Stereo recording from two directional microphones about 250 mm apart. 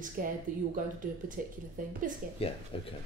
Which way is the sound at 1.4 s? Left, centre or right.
Right.